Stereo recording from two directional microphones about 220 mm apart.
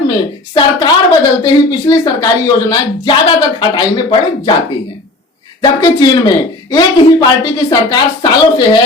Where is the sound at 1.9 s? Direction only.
20° left (ahead or behind).